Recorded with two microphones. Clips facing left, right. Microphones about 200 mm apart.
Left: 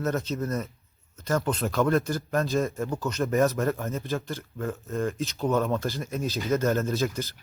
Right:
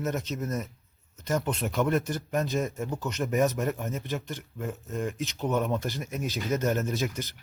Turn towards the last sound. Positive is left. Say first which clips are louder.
# left 3 dB
turn(degrees=-15)  # may be behind; listen again after turning